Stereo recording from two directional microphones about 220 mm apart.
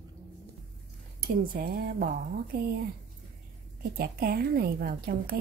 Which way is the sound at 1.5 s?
40° right (ahead or behind).